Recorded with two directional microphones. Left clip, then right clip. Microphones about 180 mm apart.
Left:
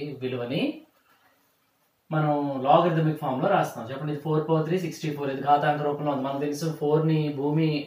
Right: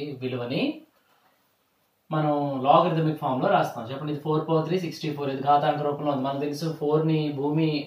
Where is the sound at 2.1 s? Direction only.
5° left (ahead or behind).